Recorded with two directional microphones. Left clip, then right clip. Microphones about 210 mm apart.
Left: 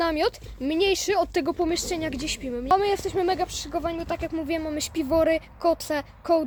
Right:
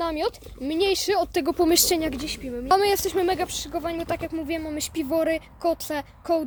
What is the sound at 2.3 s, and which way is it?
Speech, 15° left (ahead or behind).